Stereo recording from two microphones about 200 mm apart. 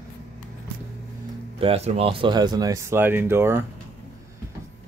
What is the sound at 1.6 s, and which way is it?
Speech, 30° right (ahead or behind).